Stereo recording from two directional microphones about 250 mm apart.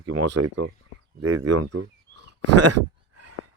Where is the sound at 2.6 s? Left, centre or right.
Right.